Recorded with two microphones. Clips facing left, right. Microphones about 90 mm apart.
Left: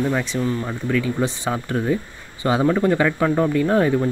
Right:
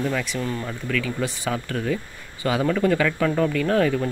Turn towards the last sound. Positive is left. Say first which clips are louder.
# left 3 dB
turn(degrees=20)  # may be behind; listen again after turning